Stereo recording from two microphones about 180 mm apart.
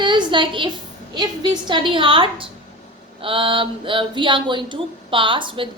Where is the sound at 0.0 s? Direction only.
25° right (ahead or behind).